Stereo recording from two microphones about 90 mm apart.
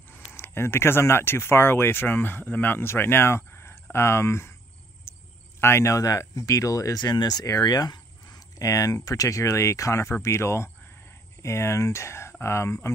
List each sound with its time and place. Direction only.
0.1 s speech: 25° left (ahead or behind)
5.1 s a sound: 30° left (ahead or behind)
5.6 s speech: 30° left (ahead or behind)